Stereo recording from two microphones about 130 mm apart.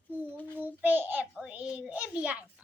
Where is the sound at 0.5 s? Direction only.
15° right (ahead or behind).